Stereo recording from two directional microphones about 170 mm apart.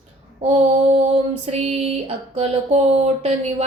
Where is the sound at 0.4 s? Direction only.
35° right (ahead or behind).